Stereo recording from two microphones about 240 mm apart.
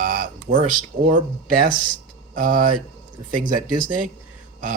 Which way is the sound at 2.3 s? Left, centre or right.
Right.